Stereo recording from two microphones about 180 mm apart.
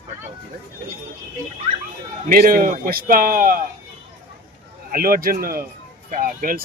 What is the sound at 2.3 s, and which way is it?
Speech, 55° right (ahead or behind).